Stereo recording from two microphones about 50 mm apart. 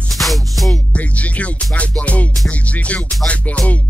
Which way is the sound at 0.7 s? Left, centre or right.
Left.